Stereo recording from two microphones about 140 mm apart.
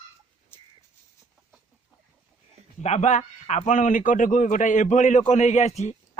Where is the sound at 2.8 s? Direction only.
55° left (ahead or behind).